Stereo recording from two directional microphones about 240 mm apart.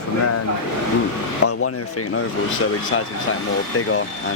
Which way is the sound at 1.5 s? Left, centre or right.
Left.